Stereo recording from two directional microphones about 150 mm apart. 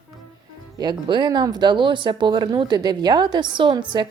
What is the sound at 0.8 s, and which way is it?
Speech, 30° right (ahead or behind).